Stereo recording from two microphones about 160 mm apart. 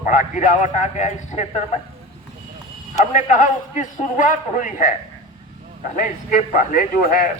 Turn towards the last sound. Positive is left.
turn(degrees=60)  # may be behind; listen again after turning